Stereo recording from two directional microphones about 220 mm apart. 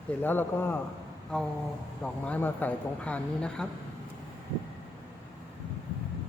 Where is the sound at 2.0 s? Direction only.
5° left (ahead or behind).